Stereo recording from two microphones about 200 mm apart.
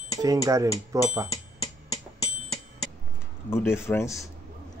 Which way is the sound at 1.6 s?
20° left (ahead or behind).